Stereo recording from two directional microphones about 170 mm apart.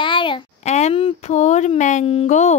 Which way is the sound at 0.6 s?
40° left (ahead or behind).